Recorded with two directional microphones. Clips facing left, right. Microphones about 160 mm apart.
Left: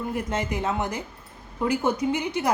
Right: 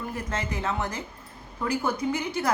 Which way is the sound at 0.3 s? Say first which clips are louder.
Left 3 dB; 15° left (ahead or behind).